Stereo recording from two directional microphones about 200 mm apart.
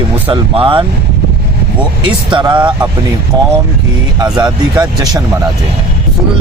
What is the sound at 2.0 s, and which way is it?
Speech, 25° right (ahead or behind).